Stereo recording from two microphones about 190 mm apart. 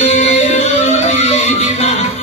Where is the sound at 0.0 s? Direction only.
35° left (ahead or behind).